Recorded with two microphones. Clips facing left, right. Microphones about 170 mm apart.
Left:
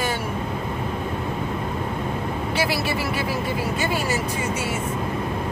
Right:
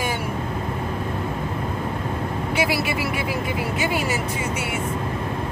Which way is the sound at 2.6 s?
15° right (ahead or behind).